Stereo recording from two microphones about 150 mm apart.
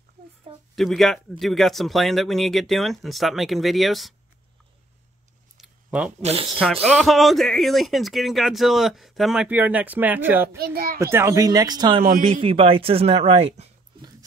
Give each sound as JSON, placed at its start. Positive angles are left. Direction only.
{"t": 0.7, "sound": "speech", "side_deg": 0}
{"t": 5.6, "sound": "a sound", "side_deg": -5}
{"t": 6.2, "sound": "speech", "side_deg": -40}
{"t": 6.6, "sound": "speech", "side_deg": 5}
{"t": 10.6, "sound": "a child's voice", "side_deg": -85}
{"t": 11.0, "sound": "speech", "side_deg": -20}
{"t": 12.0, "sound": "a man's voice", "side_deg": -65}
{"t": 12.3, "sound": "speech", "side_deg": -40}